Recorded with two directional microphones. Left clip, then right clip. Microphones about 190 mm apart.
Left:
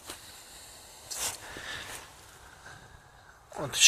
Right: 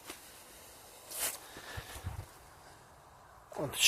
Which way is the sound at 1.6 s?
30° right (ahead or behind).